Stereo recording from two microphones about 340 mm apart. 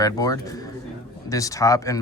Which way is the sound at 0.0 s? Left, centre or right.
Centre.